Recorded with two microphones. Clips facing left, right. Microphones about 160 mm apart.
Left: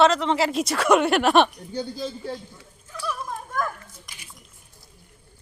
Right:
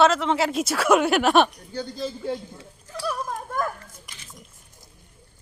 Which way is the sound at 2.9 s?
40° right (ahead or behind).